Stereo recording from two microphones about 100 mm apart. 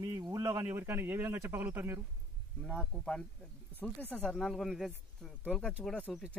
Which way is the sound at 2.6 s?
10° left (ahead or behind).